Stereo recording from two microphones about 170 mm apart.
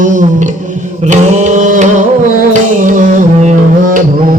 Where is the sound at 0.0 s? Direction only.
50° right (ahead or behind).